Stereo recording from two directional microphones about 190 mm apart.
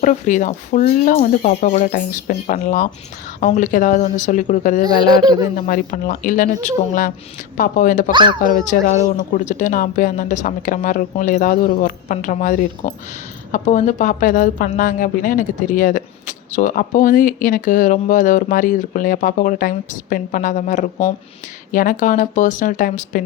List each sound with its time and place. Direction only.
0.0 s a woman's voice: 40° left (ahead or behind)
8.1 s speech: 25° right (ahead or behind)
8.4 s a woman's voice: 45° left (ahead or behind)